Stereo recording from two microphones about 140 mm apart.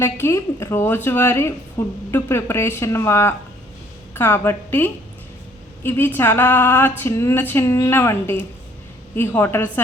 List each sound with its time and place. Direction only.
0.0 s speech: 20° left (ahead or behind)